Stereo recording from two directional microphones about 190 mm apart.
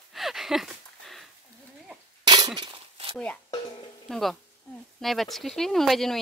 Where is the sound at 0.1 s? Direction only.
Centre (ahead or behind).